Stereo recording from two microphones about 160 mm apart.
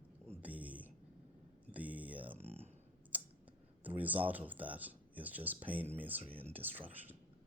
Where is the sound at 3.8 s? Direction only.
10° right (ahead or behind).